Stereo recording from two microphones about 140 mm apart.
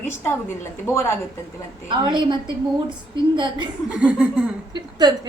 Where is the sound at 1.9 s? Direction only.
35° right (ahead or behind).